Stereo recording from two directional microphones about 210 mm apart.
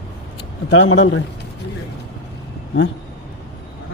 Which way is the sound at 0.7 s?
60° left (ahead or behind).